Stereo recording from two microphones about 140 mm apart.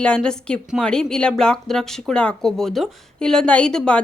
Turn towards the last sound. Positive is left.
turn(degrees=5)  # may be behind; listen again after turning